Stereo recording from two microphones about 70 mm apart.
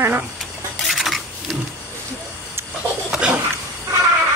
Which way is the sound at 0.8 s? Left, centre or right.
Centre.